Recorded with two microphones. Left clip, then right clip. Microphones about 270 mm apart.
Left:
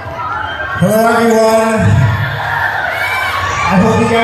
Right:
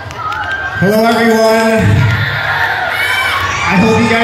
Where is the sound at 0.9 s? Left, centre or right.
Left.